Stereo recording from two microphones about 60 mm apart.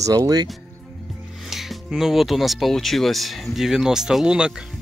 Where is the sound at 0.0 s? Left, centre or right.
Right.